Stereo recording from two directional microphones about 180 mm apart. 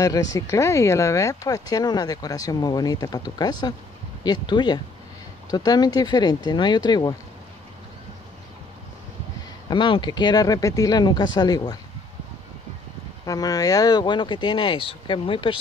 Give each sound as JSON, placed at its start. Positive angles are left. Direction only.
{"t": 0.0, "sound": "speech", "side_deg": 20}
{"t": 9.7, "sound": "speech", "side_deg": 25}
{"t": 13.2, "sound": "speech", "side_deg": 20}